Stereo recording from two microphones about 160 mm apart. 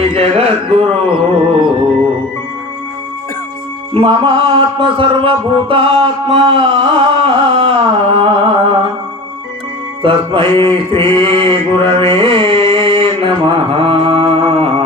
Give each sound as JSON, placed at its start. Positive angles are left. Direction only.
{"t": 0.0, "sound": "music", "side_deg": -40}
{"t": 3.9, "sound": "music", "side_deg": -35}
{"t": 10.0, "sound": "music", "side_deg": -30}
{"t": 10.8, "sound": "mantra", "side_deg": -30}